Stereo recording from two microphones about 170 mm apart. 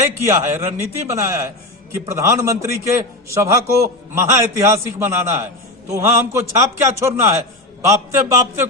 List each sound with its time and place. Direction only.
0.2 s a man's voice: 15° right (ahead or behind)